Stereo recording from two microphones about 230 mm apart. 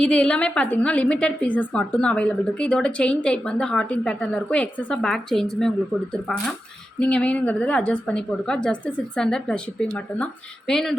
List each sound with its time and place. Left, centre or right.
0.0 s a woman's voice: centre
7.0 s a woman's voice: centre
10.7 s a woman's voice: centre